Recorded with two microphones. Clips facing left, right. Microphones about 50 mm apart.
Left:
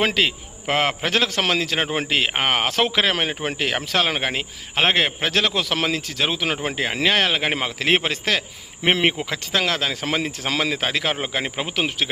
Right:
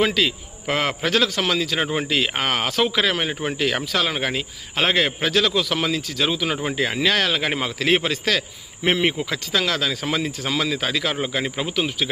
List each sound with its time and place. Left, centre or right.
0.0 s a man's voice: left